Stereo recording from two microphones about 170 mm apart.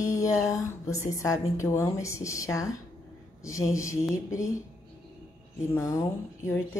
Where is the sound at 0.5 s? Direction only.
20° left (ahead or behind).